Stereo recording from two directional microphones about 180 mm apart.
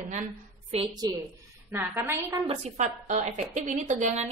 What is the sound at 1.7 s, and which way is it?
Speech, 10° right (ahead or behind).